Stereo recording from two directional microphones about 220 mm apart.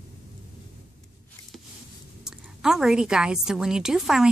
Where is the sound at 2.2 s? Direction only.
Centre (ahead or behind).